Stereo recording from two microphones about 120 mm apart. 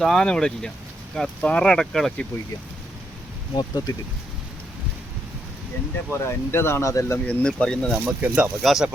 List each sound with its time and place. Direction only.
0.0 s speech: 5° left (ahead or behind)
3.5 s speech: 40° left (ahead or behind)
6.1 s speech: 20° left (ahead or behind)
7.3 s speech: 10° left (ahead or behind)
8.0 s speech: 10° right (ahead or behind)